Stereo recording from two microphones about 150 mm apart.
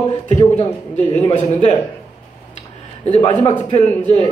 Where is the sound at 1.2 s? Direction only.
40° left (ahead or behind).